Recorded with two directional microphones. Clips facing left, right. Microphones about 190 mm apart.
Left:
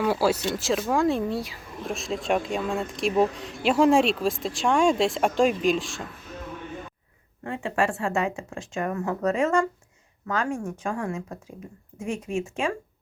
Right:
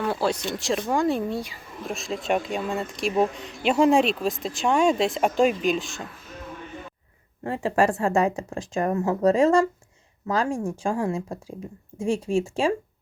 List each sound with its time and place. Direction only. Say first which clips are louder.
0.0 s speech: left 2 dB; 5° left (ahead or behind)
7.4 s speech: right 4 dB; 35° right (ahead or behind)